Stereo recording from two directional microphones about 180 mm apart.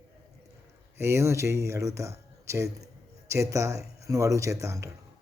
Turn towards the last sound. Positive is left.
turn(degrees=-15)  # may be behind; listen again after turning